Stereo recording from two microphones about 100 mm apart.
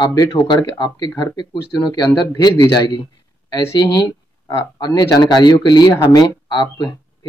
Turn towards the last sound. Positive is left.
turn(degrees=40)  # may be behind; listen again after turning